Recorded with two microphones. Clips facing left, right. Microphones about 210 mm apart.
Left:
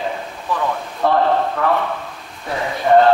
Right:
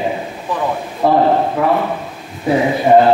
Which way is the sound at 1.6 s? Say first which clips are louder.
Right 4 dB; 10° right (ahead or behind).